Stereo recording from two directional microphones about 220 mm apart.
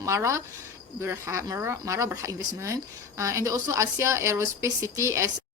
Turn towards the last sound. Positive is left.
turn(degrees=-15)  # may be behind; listen again after turning